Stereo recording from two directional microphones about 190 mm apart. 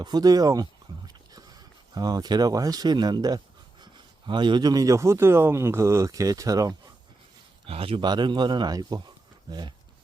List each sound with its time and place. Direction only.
0.0 s a sound: 20° right (ahead or behind)
2.0 s speech: 20° right (ahead or behind)
7.7 s speech: 30° right (ahead or behind)